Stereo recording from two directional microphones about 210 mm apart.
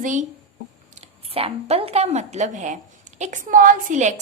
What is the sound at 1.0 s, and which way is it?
A woman's voice, 25° right (ahead or behind).